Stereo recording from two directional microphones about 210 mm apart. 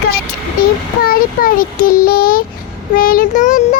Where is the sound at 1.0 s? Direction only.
45° left (ahead or behind).